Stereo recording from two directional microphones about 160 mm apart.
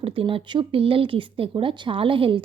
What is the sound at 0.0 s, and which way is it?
Speech, 35° right (ahead or behind).